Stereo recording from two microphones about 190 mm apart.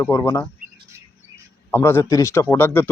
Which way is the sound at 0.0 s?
15° left (ahead or behind).